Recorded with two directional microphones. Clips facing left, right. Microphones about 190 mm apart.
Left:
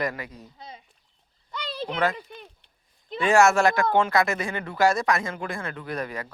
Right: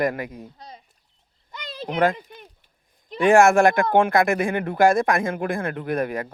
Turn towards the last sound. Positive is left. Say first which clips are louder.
# right 7 dB
turn(degrees=-55)  # may be behind; listen again after turning